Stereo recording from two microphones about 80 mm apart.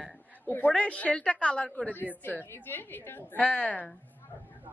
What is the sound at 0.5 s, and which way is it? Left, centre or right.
A woman's voice, left.